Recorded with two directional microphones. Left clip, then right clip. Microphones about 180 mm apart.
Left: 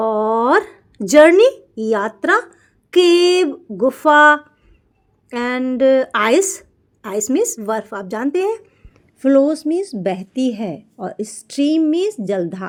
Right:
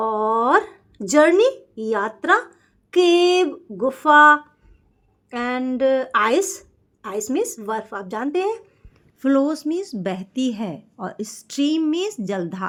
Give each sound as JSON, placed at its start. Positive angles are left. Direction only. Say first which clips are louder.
{"t": 0.0, "sound": "a sound", "louder": "left 3 dB", "side_deg": 30}
{"t": 2.9, "sound": "a woman's voice", "louder": "left 4 dB", "side_deg": 30}
{"t": 9.2, "sound": "a woman's voice", "louder": "left 6 dB", "side_deg": 10}